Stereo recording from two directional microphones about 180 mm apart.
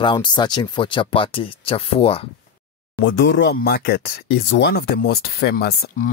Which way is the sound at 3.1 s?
75° left (ahead or behind).